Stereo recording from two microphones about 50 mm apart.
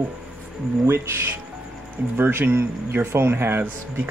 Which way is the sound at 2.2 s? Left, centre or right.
Right.